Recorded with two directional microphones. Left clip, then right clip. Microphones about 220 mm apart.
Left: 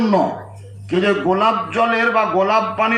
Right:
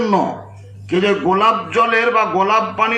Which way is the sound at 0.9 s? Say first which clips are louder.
Right 1 dB; 35° right (ahead or behind).